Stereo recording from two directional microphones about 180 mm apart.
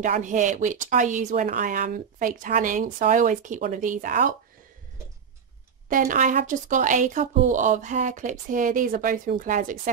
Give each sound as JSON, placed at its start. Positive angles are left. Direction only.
{"t": 0.0, "sound": "speech", "side_deg": -45}
{"t": 5.9, "sound": "speech", "side_deg": -50}